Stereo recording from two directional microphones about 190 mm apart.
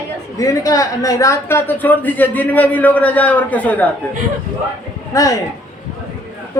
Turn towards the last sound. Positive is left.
turn(degrees=15)  # may be behind; listen again after turning